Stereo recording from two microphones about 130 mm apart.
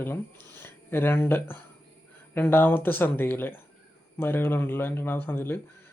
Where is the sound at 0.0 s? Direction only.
15° left (ahead or behind).